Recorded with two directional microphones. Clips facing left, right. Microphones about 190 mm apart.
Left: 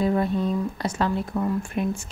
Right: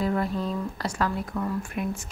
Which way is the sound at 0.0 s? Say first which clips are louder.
Left 4 dB; 25° left (ahead or behind).